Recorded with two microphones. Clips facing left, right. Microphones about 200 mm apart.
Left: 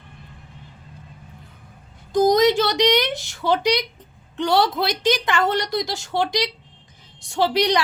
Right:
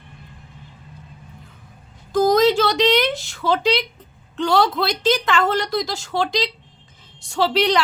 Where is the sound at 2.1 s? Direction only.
20° left (ahead or behind).